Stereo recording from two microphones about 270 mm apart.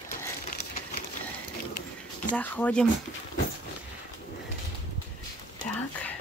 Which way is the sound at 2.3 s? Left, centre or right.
Centre.